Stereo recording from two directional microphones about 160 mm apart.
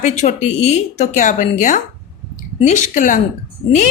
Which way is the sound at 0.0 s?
45° left (ahead or behind).